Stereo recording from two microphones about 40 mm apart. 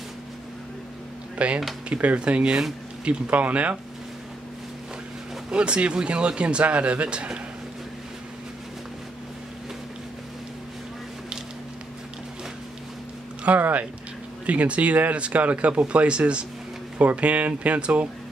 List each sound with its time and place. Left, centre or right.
1.4 s speech: right
5.5 s speech: right
13.6 s speech: right
14.4 s speech: right